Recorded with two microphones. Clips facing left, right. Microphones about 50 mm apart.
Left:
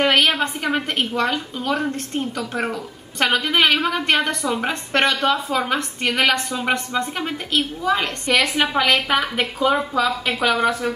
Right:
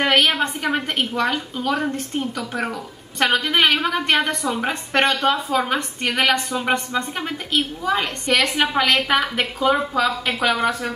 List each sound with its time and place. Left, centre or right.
0.0 s a woman's voice: centre